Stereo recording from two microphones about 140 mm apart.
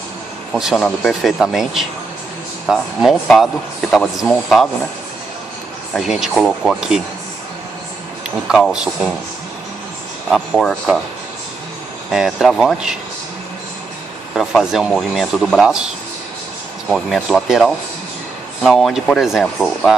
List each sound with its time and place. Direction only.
0.5 s speech: centre (ahead or behind)
5.9 s speech: 5° right (ahead or behind)
8.5 s speech: 5° right (ahead or behind)
10.3 s speech: centre (ahead or behind)
12.1 s speech: centre (ahead or behind)
14.3 s speech: centre (ahead or behind)
16.9 s speech: 5° right (ahead or behind)